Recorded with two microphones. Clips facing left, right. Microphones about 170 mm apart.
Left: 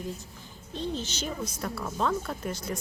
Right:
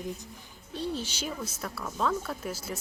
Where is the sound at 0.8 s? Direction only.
10° right (ahead or behind).